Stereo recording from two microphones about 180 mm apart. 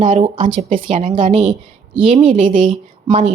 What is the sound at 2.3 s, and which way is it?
Speech, 45° right (ahead or behind).